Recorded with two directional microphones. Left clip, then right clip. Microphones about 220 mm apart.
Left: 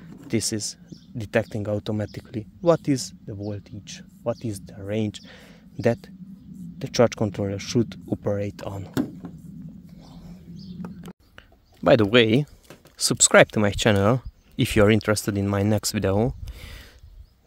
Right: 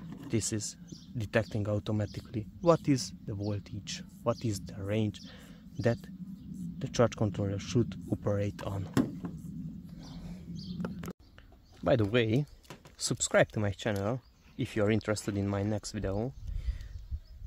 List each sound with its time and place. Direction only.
0.3 s speech: 25° left (ahead or behind)
10.1 s bird: 5° right (ahead or behind)
11.8 s speech: 40° left (ahead or behind)
14.9 s speech: 35° left (ahead or behind)